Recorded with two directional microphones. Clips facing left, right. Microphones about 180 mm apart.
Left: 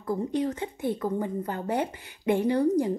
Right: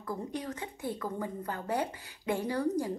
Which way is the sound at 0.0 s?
25° left (ahead or behind).